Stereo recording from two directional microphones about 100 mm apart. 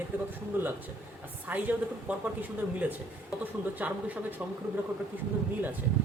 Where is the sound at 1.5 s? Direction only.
15° right (ahead or behind).